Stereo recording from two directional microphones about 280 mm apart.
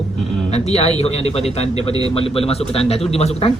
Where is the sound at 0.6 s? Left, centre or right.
Left.